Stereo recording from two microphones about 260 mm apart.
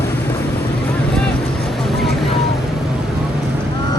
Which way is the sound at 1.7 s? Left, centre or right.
Centre.